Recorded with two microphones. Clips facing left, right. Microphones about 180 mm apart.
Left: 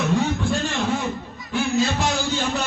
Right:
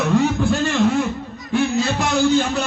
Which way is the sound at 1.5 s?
65° right (ahead or behind).